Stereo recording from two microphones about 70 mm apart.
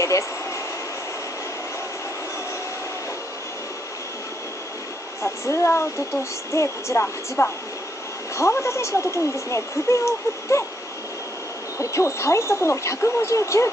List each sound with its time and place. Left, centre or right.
5.2 s speech: left
11.8 s speech: left